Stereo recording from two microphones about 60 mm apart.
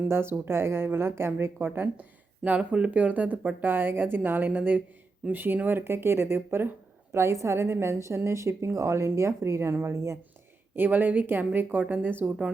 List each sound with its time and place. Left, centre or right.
0.1 s a woman's voice: right
2.6 s a woman's voice: centre; by 10.2 s right
10.8 s speech: right